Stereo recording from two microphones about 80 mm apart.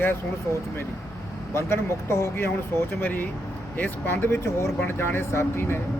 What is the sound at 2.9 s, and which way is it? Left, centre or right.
Speech, left.